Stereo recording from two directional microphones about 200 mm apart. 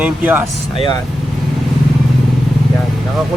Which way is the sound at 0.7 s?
25° left (ahead or behind).